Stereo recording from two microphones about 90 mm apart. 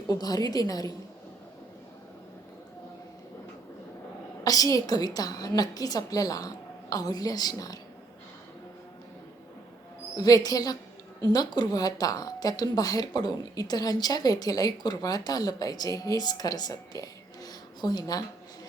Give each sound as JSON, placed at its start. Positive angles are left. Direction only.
{"t": 0.1, "sound": "a woman's voice", "side_deg": 45}
{"t": 4.4, "sound": "a woman's voice", "side_deg": 40}
{"t": 10.2, "sound": "a woman's voice", "side_deg": 45}